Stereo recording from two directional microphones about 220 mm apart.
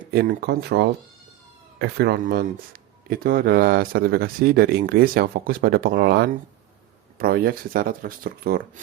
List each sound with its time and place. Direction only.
0.0 s speech: 40° right (ahead or behind)